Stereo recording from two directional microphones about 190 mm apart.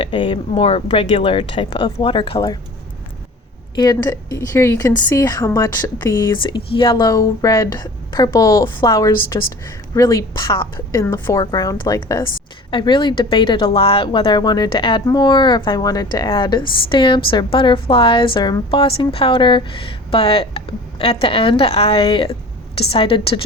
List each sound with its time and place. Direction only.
0.0 s a woman's voice: 25° left (ahead or behind)
3.8 s a woman's voice: 20° left (ahead or behind)